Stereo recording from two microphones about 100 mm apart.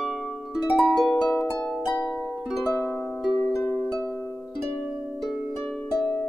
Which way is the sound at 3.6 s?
20° left (ahead or behind).